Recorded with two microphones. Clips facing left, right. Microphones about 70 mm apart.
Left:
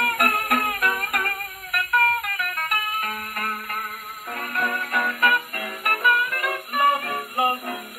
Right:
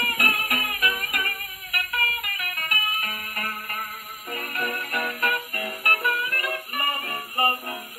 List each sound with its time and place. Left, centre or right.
0.0 s music: left